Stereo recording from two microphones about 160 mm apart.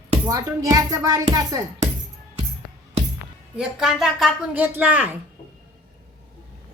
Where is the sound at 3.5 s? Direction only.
5° right (ahead or behind).